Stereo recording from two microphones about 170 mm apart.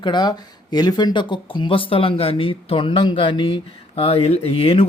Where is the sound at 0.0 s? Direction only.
25° left (ahead or behind).